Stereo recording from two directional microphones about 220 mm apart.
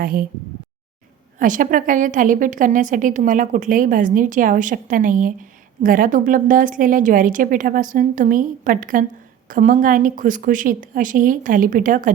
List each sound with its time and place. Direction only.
0.0 s a woman's voice: 40° right (ahead or behind)
1.4 s a woman's voice: 35° right (ahead or behind)